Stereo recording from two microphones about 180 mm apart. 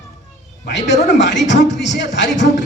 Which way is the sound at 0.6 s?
75° left (ahead or behind).